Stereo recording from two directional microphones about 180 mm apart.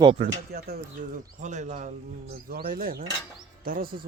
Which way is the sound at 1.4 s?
40° right (ahead or behind).